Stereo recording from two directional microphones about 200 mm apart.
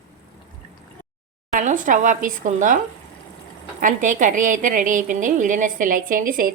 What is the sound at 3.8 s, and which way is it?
A woman's voice, 40° right (ahead or behind).